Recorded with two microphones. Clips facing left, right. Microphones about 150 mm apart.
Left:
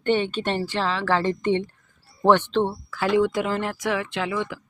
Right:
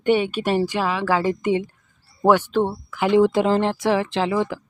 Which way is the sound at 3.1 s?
30° right (ahead or behind).